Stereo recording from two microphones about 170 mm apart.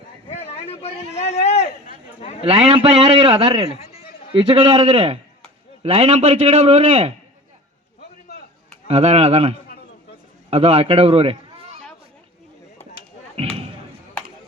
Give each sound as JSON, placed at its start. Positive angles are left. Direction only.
{"t": 0.3, "sound": "a sound", "side_deg": 35}
{"t": 2.4, "sound": "a man's voice", "side_deg": -35}
{"t": 3.7, "sound": "speech", "side_deg": 40}
{"t": 4.4, "sound": "a man's voice", "side_deg": -35}
{"t": 8.9, "sound": "a man's voice", "side_deg": -40}
{"t": 13.3, "sound": "slam", "side_deg": -35}